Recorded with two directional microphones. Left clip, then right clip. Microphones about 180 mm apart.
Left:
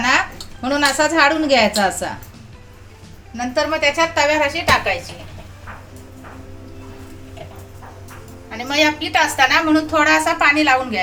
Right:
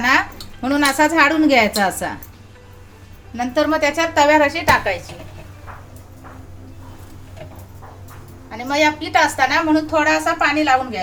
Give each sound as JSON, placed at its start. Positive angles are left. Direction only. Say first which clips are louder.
{"t": 0.6, "sound": "a woman's voice", "louder": "even", "side_deg": -30}
{"t": 3.3, "sound": "a woman's voice", "louder": "right 1 dB", "side_deg": -40}
{"t": 8.4, "sound": "a woman's voice", "louder": "even", "side_deg": -15}